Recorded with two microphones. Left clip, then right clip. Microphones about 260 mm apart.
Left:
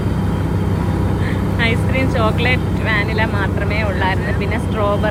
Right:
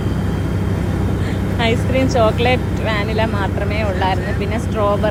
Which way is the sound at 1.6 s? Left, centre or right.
Centre.